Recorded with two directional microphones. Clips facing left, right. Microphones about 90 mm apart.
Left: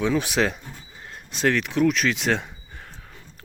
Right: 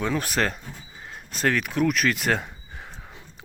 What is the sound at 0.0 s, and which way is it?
Speech, centre (ahead or behind).